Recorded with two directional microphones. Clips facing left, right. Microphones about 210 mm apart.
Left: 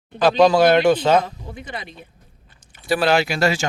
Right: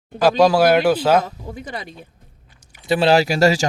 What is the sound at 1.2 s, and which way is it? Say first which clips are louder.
Speech: right 3 dB; 40° right (ahead or behind).